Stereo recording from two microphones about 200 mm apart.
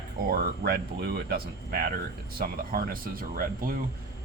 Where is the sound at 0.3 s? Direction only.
50° right (ahead or behind).